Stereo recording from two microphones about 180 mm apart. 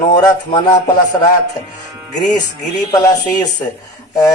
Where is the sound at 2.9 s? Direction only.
20° left (ahead or behind).